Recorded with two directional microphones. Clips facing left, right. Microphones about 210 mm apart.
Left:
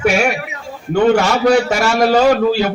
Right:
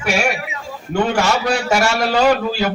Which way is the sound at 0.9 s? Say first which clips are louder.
Left 5 dB; 50° left (ahead or behind).